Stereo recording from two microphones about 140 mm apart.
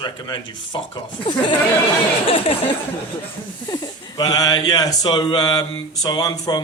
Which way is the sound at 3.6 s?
30° left (ahead or behind).